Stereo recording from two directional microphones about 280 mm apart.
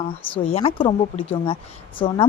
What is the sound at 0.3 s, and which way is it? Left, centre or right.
A woman's voice, centre.